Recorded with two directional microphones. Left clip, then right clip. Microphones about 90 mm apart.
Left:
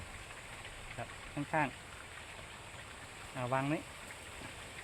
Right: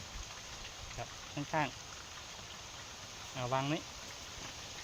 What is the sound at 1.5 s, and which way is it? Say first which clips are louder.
Speech: left 1 dB; 20° left (ahead or behind).